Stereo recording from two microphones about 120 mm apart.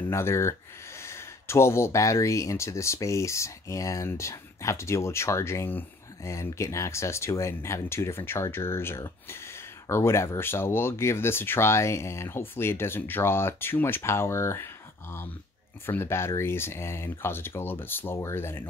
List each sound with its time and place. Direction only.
0.1 s speech: 20° left (ahead or behind)